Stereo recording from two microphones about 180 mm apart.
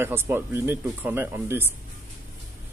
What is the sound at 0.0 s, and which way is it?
Speech, 10° right (ahead or behind).